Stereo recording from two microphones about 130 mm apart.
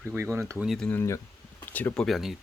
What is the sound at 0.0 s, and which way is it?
Speech, 15° right (ahead or behind).